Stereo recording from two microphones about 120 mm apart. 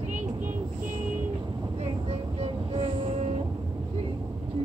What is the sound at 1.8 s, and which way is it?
Vehicle, 60° right (ahead or behind).